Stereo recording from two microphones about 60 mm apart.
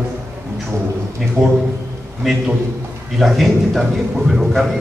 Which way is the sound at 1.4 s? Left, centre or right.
Right.